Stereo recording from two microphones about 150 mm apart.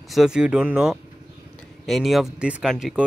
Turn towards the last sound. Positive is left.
turn(degrees=0)  # may be behind; listen again after turning